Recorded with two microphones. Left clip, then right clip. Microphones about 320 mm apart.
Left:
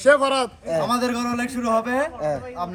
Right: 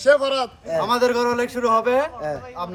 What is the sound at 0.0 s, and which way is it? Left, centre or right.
Speech, centre.